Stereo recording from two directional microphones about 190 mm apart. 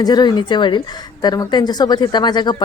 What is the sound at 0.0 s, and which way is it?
A woman's voice, 20° left (ahead or behind).